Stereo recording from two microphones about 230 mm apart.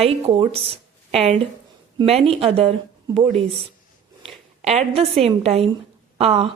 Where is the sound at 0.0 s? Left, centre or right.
Right.